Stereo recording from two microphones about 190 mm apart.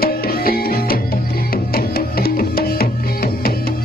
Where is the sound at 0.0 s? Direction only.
50° left (ahead or behind).